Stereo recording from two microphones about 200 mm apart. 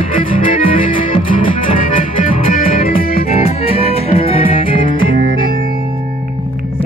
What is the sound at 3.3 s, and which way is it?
Music, 30° left (ahead or behind).